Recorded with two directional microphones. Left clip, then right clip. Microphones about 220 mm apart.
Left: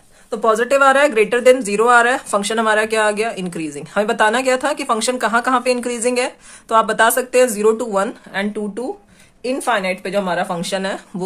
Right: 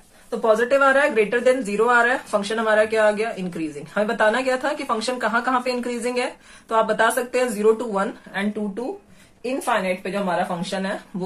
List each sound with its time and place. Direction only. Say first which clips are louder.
0.3 s speech: left 3 dB; 40° left (ahead or behind)